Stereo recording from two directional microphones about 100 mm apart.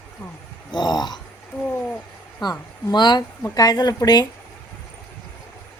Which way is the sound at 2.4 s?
45° left (ahead or behind).